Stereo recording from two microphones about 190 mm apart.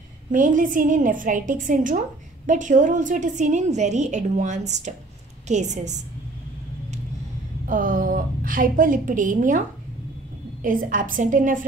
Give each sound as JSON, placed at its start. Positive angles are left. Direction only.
{"t": 0.3, "sound": "a woman's voice", "side_deg": -45}
{"t": 7.6, "sound": "a woman's voice", "side_deg": -45}
{"t": 10.6, "sound": "a woman's voice", "side_deg": -45}